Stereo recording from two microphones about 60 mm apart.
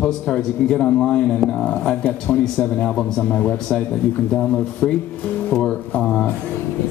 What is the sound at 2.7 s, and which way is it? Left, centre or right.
Speech, centre.